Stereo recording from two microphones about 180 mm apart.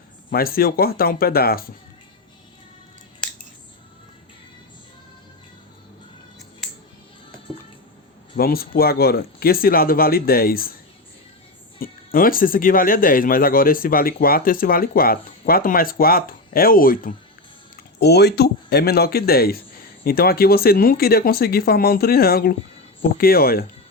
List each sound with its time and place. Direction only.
0.3 s speech: 55° left (ahead or behind)
8.4 s speech: 55° left (ahead or behind)
11.8 s speech: 50° left (ahead or behind)
18.0 s speech: 65° left (ahead or behind)